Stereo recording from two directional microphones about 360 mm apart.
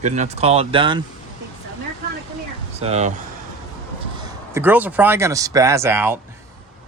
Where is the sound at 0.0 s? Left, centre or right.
Centre.